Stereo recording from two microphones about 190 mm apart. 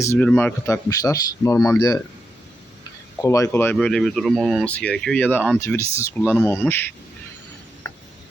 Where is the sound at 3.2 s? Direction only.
15° left (ahead or behind).